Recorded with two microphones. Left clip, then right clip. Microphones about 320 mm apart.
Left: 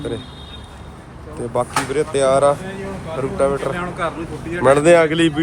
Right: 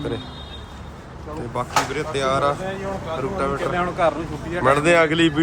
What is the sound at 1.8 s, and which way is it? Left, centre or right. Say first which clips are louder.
A man's voice: left 6 dB; centre.